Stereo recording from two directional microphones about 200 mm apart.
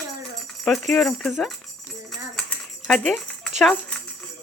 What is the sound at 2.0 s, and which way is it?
Dishes, 5° left (ahead or behind).